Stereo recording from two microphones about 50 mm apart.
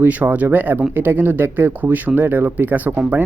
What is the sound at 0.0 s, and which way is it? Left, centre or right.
Speech, right.